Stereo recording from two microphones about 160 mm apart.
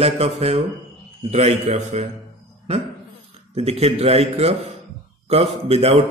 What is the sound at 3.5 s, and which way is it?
Speech, 40° right (ahead or behind).